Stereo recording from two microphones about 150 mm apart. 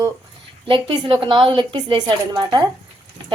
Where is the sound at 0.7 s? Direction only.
35° right (ahead or behind).